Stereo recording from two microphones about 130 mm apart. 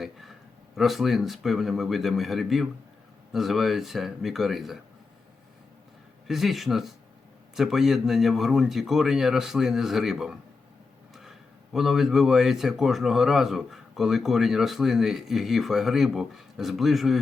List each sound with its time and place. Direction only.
0.0 s a sound: centre (ahead or behind)
0.8 s speech: centre (ahead or behind)
6.2 s speech: centre (ahead or behind)